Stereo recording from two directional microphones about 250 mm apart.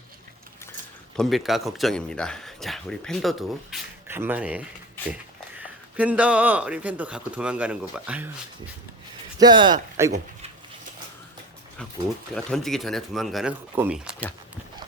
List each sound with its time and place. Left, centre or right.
1.1 s speech: centre
9.4 s speech: centre
12.3 s speech: centre